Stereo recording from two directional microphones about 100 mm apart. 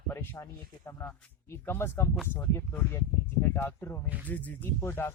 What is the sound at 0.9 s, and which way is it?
Speech, 25° left (ahead or behind).